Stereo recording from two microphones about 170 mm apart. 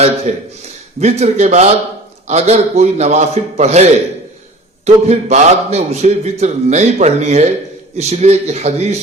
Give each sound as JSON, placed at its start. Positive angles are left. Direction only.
{"t": 0.3, "sound": "a man's voice", "side_deg": -45}
{"t": 4.9, "sound": "a man's voice", "side_deg": -40}